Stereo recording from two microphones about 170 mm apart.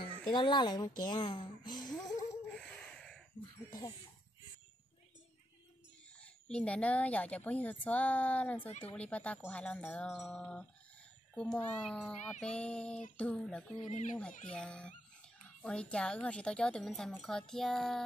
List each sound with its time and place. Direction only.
0.3 s a woman's voice: 30° left (ahead or behind)
2.0 s a sound: 5° left (ahead or behind)
3.3 s music: 25° left (ahead or behind)
6.2 s a woman's voice: 5° left (ahead or behind)
13.7 s speech: 45° left (ahead or behind)
14.4 s speech: 5° left (ahead or behind)